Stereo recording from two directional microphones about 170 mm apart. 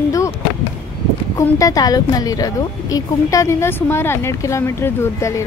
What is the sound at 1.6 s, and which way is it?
A woman's voice, 20° left (ahead or behind).